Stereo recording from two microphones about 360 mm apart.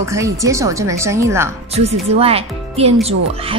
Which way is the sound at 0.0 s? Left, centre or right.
Centre.